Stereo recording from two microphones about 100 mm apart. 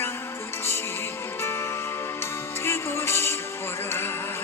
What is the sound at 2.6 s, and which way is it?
Music, 25° left (ahead or behind).